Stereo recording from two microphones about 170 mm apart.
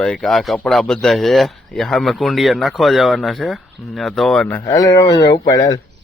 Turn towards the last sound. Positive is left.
turn(degrees=20)  # may be behind; listen again after turning